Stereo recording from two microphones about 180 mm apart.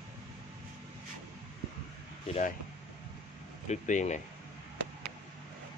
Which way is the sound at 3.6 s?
40° left (ahead or behind).